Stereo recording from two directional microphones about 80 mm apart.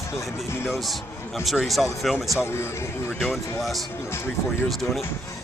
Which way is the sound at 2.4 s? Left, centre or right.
Left.